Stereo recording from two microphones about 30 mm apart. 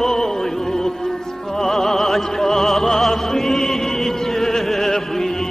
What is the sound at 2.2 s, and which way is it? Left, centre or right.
Music, centre.